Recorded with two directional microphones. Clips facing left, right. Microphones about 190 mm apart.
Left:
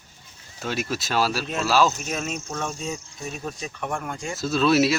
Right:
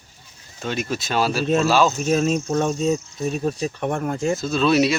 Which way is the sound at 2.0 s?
35° right (ahead or behind).